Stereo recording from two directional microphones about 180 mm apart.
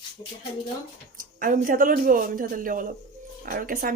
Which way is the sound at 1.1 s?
50° right (ahead or behind).